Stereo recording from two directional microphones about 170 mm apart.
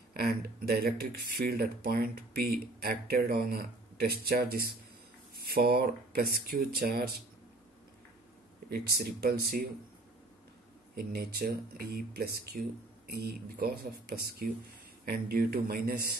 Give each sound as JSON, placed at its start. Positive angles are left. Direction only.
{"t": 0.1, "sound": "speech", "side_deg": -65}
{"t": 8.6, "sound": "speech", "side_deg": -65}
{"t": 11.0, "sound": "speech", "side_deg": -65}